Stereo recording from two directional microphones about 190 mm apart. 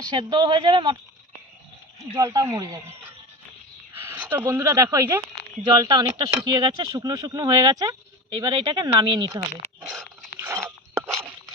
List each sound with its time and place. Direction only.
0.1 s speech: 25° right (ahead or behind)
2.1 s speech: 20° right (ahead or behind)